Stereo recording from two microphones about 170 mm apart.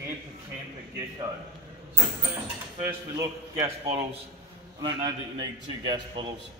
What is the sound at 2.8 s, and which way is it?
Speech, 20° right (ahead or behind).